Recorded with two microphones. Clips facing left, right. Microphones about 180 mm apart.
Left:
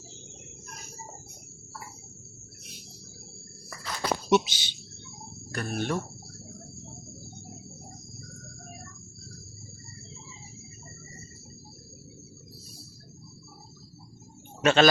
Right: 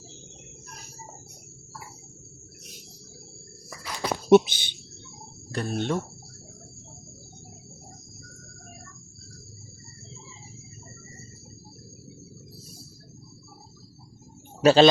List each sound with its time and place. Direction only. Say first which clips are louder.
3.7 s walk: right 1 dB; 10° right (ahead or behind)
4.3 s speech: right 9 dB; 55° right (ahead or behind)
5.5 s speech: right 3 dB; 25° right (ahead or behind)
14.6 s speech: right 5 dB; 35° right (ahead or behind)